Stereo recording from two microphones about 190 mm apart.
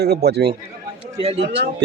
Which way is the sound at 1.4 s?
65° right (ahead or behind).